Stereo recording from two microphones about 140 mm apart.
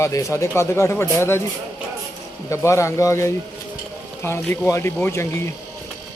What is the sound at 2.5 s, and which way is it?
Speech, 20° left (ahead or behind).